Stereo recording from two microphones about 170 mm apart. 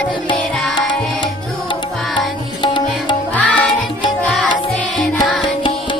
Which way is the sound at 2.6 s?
30° left (ahead or behind).